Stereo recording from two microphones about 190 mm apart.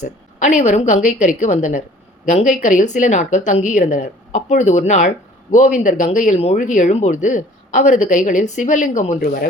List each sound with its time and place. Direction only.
0.0 s a woman's voice: 40° left (ahead or behind)